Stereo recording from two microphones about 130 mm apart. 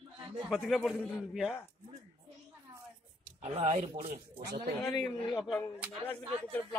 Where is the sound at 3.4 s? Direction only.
50° right (ahead or behind).